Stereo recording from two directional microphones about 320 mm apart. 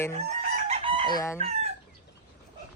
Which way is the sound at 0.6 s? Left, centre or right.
Centre.